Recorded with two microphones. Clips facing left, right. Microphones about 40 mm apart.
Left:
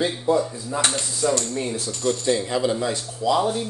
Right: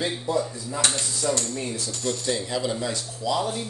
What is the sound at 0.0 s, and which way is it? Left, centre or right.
Speech, left.